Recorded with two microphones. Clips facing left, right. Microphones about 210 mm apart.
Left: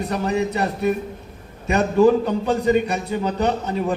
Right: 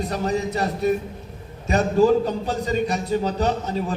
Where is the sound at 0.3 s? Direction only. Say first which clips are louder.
Left 2 dB; 60° left (ahead or behind).